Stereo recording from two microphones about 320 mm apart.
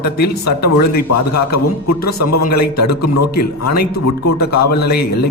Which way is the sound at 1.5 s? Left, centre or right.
Left.